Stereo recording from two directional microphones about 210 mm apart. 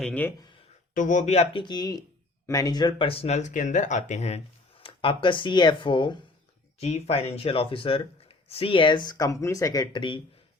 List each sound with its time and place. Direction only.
0.0 s speech: 10° left (ahead or behind)
0.9 s speech: 35° left (ahead or behind); by 10.2 s 20° left (ahead or behind)